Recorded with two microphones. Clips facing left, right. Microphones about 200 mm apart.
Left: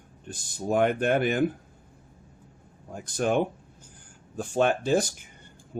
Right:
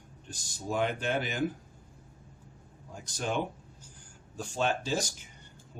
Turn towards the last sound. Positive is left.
turn(degrees=55)  # may be behind; listen again after turning